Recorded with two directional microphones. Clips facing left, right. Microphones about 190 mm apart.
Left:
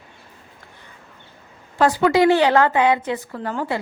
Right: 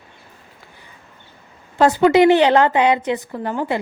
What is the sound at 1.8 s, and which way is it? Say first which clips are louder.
A woman's voice: right 3 dB; 20° right (ahead or behind).